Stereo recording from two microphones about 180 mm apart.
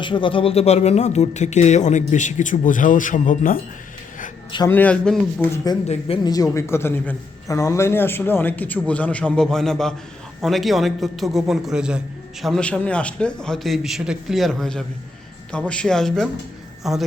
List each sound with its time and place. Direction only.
0.0 s speech: 25° left (ahead or behind); by 3.6 s 50° left (ahead or behind)
4.7 s a man's voice: 10° left (ahead or behind)
5.7 s a man's voice: 25° left (ahead or behind); by 17.0 s centre (ahead or behind)